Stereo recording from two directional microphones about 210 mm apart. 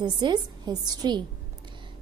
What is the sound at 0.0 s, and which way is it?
A woman's voice, 20° right (ahead or behind).